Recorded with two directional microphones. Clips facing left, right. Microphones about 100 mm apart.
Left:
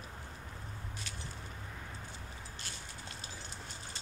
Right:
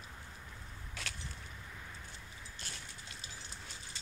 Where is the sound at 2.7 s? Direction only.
90° left.